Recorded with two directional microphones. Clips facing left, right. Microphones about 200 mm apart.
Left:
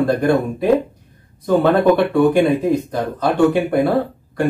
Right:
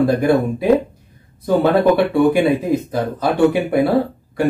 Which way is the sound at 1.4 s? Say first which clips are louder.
Even; 10° right (ahead or behind).